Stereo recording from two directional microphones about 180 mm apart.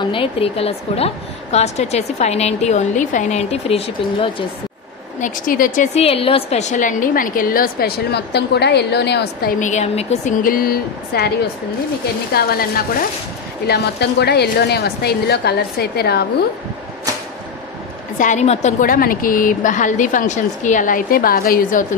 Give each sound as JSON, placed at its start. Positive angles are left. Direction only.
{"t": 0.0, "sound": "a woman's voice", "side_deg": 30}
{"t": 5.2, "sound": "a woman's voice", "side_deg": 50}
{"t": 5.9, "sound": "a woman's voice", "side_deg": 30}
{"t": 9.6, "sound": "a woman's voice", "side_deg": 40}
{"t": 10.4, "sound": "a woman's voice", "side_deg": 55}
{"t": 12.4, "sound": "a woman's voice", "side_deg": 55}
{"t": 18.2, "sound": "a woman's voice", "side_deg": 40}